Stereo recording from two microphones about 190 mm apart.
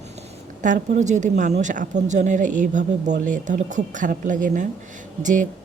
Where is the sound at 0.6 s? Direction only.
40° right (ahead or behind).